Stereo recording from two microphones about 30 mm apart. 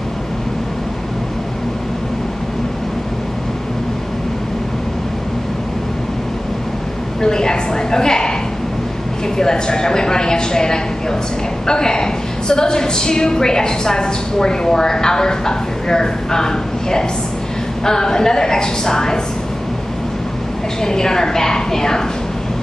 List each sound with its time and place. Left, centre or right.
7.2 s a sound: left
9.4 s a woman's voice: left
20.8 s a woman's voice: centre